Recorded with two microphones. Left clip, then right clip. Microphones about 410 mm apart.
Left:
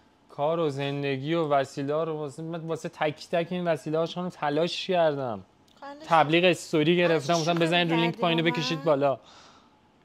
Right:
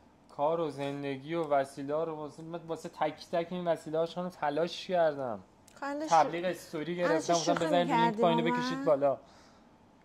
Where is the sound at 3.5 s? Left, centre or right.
Left.